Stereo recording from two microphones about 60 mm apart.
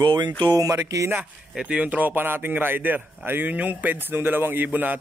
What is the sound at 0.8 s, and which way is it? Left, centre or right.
Speech, right.